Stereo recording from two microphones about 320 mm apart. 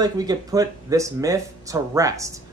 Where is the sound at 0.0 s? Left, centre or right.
Centre.